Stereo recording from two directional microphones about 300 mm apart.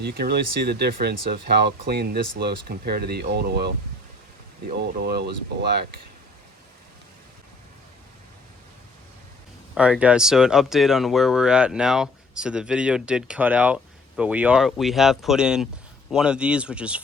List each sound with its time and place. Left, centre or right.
0.0 s speech: right
4.7 s speech: right
9.7 s speech: centre